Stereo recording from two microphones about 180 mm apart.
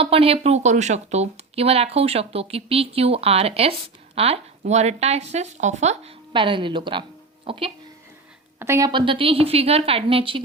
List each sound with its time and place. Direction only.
0.0 s speech: 30° right (ahead or behind)
8.5 s a woman's voice: 15° right (ahead or behind)
8.9 s speech: 25° right (ahead or behind)